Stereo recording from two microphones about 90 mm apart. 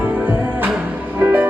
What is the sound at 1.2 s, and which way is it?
Music, 20° right (ahead or behind).